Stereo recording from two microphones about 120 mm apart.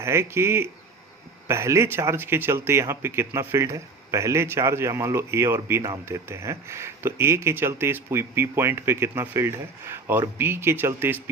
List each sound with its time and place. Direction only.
0.0 s speech: 20° right (ahead or behind)